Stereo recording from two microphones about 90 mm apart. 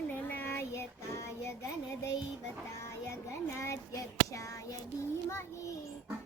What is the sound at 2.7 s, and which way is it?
Child singing, 35° left (ahead or behind).